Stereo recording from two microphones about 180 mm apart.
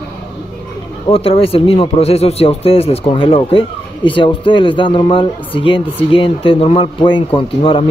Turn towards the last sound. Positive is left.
turn(degrees=30)  # may be behind; listen again after turning